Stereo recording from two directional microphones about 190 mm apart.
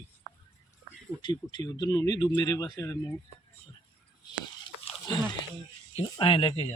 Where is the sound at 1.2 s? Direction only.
25° left (ahead or behind).